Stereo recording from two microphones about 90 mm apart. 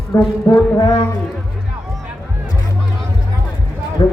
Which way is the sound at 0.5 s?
40° left (ahead or behind).